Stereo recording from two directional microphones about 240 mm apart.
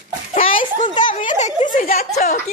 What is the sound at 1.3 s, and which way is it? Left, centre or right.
Speech, left.